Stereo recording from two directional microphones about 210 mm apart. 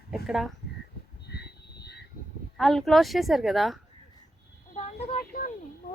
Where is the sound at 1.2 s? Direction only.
50° left (ahead or behind).